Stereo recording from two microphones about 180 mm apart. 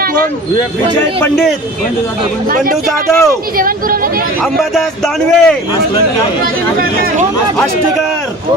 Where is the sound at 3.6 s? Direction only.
50° right (ahead or behind).